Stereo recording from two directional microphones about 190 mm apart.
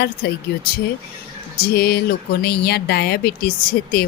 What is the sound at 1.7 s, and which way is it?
Speech, 55° left (ahead or behind).